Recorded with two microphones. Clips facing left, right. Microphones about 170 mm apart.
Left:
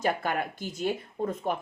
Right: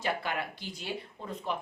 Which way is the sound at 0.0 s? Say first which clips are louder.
Left 5 dB; 45° left (ahead or behind).